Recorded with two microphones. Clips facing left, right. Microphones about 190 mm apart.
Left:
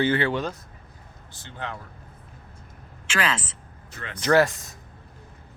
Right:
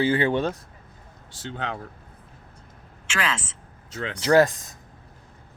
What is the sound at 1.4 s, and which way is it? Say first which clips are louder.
Speech: right 4 dB; 90° right.